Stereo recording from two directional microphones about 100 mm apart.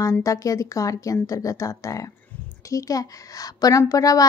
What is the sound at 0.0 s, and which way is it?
A woman's voice, 35° left (ahead or behind).